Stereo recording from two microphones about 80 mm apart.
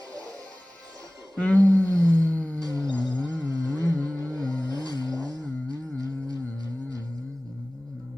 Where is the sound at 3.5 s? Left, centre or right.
Right.